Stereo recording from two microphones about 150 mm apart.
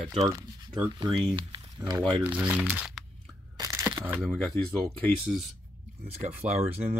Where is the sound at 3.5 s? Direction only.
20° right (ahead or behind).